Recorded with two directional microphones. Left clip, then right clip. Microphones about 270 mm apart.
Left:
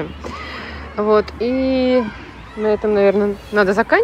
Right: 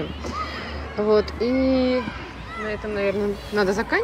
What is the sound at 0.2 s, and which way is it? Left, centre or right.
Speech, centre.